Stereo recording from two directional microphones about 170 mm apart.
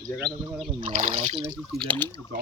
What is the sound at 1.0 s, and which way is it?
Speech, 40° right (ahead or behind).